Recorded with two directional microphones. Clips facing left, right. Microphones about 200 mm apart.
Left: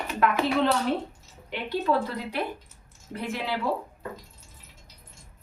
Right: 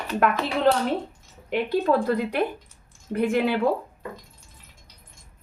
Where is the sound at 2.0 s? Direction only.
50° right (ahead or behind).